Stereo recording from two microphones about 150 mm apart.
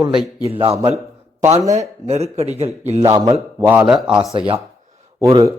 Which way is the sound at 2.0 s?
45° right (ahead or behind).